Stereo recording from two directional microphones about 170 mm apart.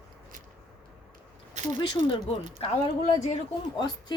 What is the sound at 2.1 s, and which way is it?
Speech, 30° left (ahead or behind).